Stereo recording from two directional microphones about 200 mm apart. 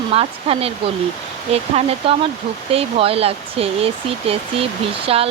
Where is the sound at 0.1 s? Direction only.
30° right (ahead or behind).